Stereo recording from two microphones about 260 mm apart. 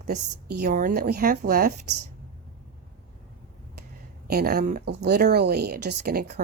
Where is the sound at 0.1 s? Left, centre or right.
Right.